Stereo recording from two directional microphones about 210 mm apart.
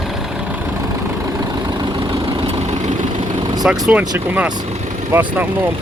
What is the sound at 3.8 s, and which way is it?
Speech, 5° right (ahead or behind).